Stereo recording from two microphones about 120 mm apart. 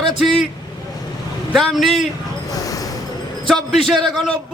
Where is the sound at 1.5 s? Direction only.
5° left (ahead or behind).